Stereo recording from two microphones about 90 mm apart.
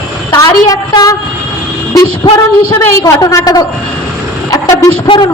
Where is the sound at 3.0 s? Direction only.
40° left (ahead or behind).